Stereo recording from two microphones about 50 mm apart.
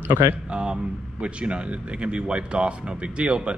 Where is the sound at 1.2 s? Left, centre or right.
Right.